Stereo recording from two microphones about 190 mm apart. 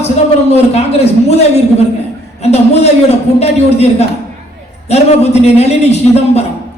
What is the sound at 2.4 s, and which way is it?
A man's voice, 35° left (ahead or behind).